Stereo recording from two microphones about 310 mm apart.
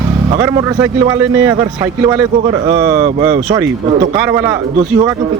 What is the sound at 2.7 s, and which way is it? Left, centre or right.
A man's voice, centre.